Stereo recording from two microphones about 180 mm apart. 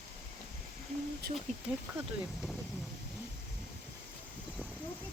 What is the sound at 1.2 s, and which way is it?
Speech, 65° right (ahead or behind).